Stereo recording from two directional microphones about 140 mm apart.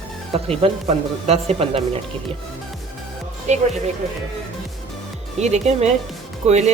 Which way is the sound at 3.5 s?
55° right (ahead or behind).